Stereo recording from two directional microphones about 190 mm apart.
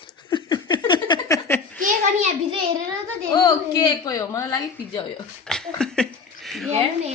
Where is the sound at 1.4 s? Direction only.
10° left (ahead or behind).